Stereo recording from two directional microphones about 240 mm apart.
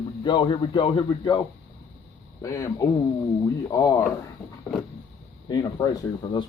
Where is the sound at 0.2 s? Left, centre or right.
Centre.